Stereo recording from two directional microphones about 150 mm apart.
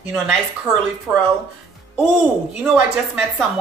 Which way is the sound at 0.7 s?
25° right (ahead or behind).